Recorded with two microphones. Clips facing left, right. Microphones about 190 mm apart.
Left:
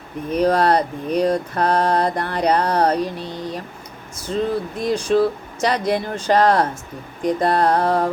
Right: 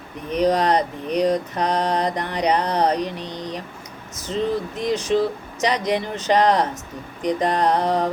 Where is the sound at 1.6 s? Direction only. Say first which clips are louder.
Left 3 dB; 15° right (ahead or behind).